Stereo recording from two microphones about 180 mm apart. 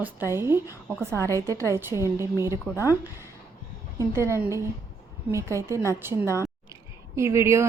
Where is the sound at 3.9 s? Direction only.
15° right (ahead or behind).